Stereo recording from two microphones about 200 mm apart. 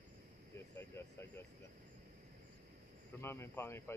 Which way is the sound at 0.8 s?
10° left (ahead or behind).